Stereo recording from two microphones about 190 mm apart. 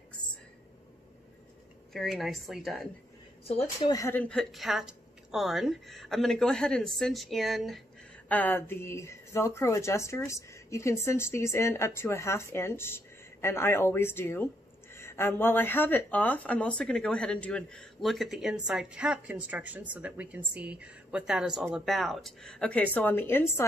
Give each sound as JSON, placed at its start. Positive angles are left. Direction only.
{"t": 1.9, "sound": "a woman's voice", "side_deg": 0}
{"t": 3.4, "sound": "a woman's voice", "side_deg": 30}
{"t": 3.9, "sound": "a woman's voice", "side_deg": 15}